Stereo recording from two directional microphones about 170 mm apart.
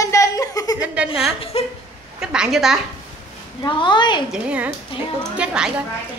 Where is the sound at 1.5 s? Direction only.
35° left (ahead or behind).